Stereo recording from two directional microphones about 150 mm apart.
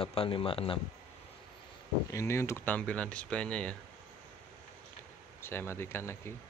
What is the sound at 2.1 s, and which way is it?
Speech, 20° left (ahead or behind).